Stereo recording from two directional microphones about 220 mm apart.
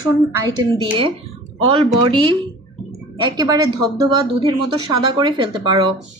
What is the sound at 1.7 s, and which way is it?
Speech, 25° right (ahead or behind).